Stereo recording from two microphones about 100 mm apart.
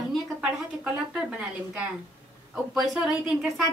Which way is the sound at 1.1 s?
10° right (ahead or behind).